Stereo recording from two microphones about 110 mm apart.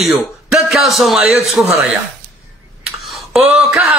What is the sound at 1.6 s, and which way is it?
Speech, 15° right (ahead or behind).